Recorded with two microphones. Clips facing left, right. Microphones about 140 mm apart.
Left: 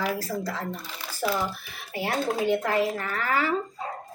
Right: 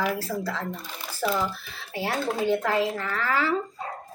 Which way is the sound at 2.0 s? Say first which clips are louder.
Even; 15° left (ahead or behind).